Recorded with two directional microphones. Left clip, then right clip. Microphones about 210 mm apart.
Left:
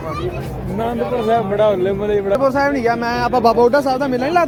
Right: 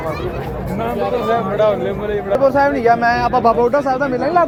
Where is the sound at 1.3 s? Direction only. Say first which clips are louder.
Left 1 dB; 45° left (ahead or behind).